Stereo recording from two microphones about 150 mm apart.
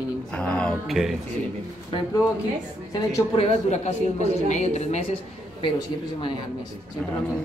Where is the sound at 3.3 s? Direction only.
45° left (ahead or behind).